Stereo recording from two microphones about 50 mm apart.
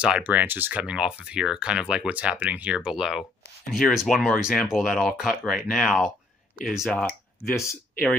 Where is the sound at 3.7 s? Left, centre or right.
Centre.